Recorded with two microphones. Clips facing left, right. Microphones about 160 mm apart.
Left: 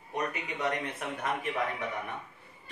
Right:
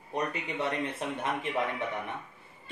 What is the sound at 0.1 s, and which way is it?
Speech, 30° right (ahead or behind).